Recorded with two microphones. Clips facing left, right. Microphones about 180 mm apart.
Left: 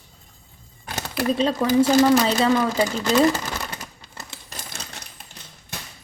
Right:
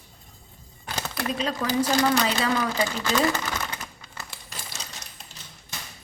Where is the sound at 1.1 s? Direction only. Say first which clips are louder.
Left 8 dB; 30° left (ahead or behind).